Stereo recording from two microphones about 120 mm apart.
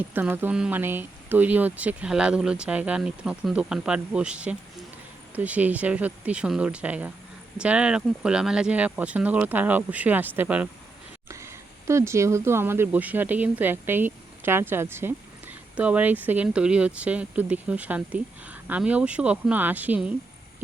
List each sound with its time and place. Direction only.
0.1 s speech: 15° right (ahead or behind)